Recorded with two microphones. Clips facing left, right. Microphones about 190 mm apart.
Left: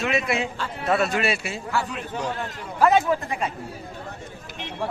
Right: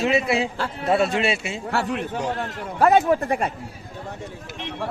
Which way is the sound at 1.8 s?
60° right (ahead or behind).